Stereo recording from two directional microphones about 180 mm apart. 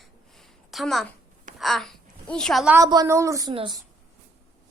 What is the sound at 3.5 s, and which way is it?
Speech, 30° right (ahead or behind).